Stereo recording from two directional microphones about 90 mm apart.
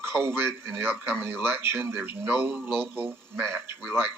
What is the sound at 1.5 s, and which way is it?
Speech, 25° right (ahead or behind).